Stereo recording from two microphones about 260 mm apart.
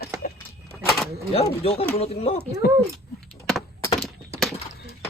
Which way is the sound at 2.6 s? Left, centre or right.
Left.